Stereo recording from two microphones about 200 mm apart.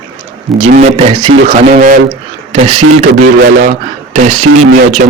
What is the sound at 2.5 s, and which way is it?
Speech, 30° right (ahead or behind).